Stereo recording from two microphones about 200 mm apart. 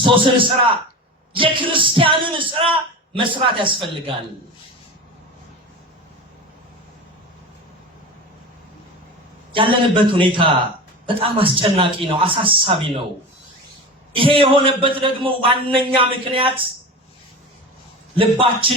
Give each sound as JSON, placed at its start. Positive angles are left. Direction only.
{"t": 0.0, "sound": "a man's voice", "side_deg": -25}
{"t": 9.6, "sound": "a man's voice", "side_deg": -25}
{"t": 14.2, "sound": "a man's voice", "side_deg": -25}
{"t": 18.2, "sound": "a man's voice", "side_deg": -25}